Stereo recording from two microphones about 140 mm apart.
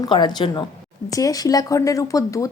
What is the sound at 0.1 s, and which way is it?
A woman's voice, 35° left (ahead or behind).